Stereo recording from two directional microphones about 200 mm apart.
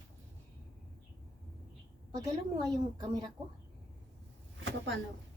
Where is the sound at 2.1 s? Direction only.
20° right (ahead or behind).